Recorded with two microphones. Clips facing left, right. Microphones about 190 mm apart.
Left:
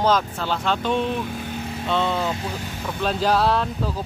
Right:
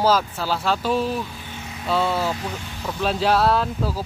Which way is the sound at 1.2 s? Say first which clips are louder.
Left 7 dB; 55° left (ahead or behind).